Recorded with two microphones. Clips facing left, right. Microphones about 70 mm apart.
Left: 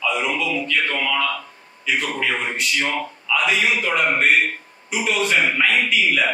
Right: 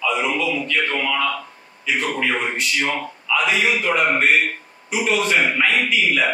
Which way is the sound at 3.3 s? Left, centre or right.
Centre.